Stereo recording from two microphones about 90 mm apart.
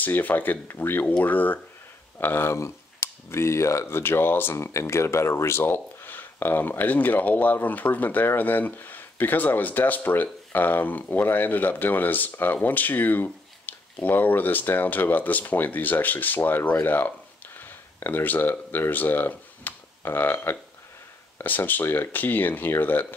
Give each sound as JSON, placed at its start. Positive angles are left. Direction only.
{"t": 0.0, "sound": "speech", "side_deg": 20}